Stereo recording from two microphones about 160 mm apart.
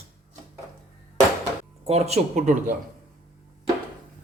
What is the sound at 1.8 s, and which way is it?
Speech, 40° right (ahead or behind).